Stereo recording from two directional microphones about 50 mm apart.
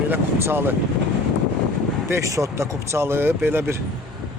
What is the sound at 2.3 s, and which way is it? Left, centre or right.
Speech, right.